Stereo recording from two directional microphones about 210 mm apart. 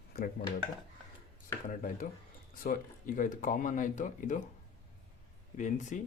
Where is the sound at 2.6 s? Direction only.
40° left (ahead or behind).